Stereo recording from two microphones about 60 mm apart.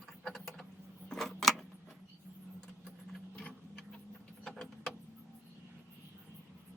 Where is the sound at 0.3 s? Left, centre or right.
Centre.